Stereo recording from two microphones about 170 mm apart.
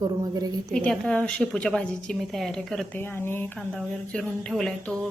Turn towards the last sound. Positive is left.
turn(degrees=5)  # may be behind; listen again after turning